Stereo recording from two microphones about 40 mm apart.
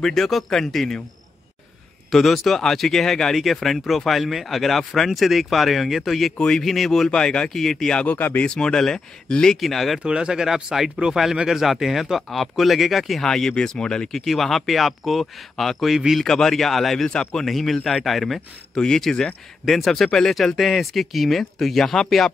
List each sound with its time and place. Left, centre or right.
0.0 s speech: centre
2.0 s speech: centre
6.3 s speech: centre
6.6 s speech: centre
7.1 s speech: left
7.5 s speech: centre
8.5 s speech: centre
9.6 s speech: centre
9.9 s speech: right; by 13.2 s centre
13.2 s speech: centre
14.0 s speech: centre
17.0 s speech: centre
17.5 s speech: centre
18.8 s speech: centre